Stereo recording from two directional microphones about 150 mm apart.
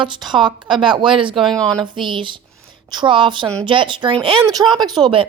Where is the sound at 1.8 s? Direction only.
35° right (ahead or behind).